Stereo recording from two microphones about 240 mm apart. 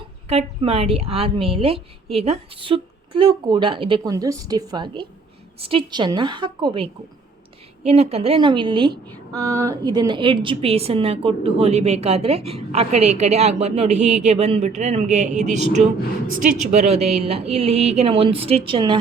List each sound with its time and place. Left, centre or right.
0.3 s speech: right
7.9 s speech: right
17.0 s speech: right
17.2 s speech: right